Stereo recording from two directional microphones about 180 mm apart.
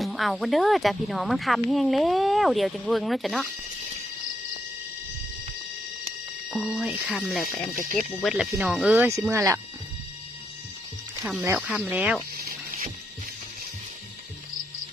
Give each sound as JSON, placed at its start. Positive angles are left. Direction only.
{"t": 0.0, "sound": "speech", "side_deg": 0}
{"t": 6.5, "sound": "speech", "side_deg": 0}
{"t": 11.3, "sound": "speech", "side_deg": -5}